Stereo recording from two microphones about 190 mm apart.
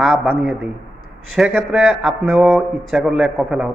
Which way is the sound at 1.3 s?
Centre (ahead or behind).